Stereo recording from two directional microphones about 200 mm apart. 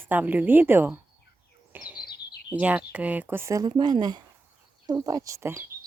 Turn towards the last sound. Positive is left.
turn(degrees=-15)  # may be behind; listen again after turning